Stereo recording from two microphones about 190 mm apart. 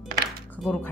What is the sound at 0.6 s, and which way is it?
Speech, 5° left (ahead or behind).